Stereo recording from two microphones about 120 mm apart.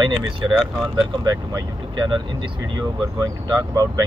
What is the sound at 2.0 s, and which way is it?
Speech, 40° right (ahead or behind).